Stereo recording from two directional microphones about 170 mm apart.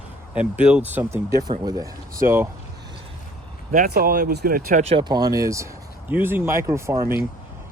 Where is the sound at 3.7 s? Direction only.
60° right (ahead or behind).